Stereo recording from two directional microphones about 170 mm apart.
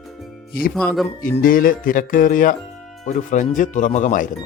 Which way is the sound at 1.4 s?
55° left (ahead or behind).